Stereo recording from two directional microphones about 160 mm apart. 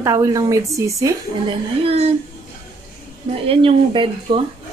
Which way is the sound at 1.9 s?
40° right (ahead or behind).